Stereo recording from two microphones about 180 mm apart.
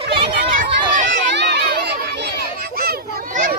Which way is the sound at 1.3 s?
75° right (ahead or behind).